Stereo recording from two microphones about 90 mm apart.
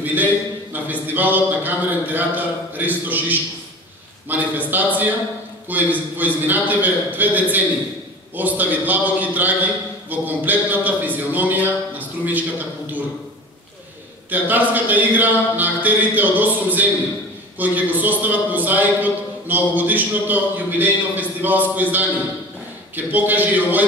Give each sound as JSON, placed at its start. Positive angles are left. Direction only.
{"t": 0.0, "sound": "a sound", "side_deg": -20}
{"t": 1.0, "sound": "a man's voice", "side_deg": -20}
{"t": 14.3, "sound": "a man's voice", "side_deg": -20}
{"t": 22.9, "sound": "a man's voice", "side_deg": -20}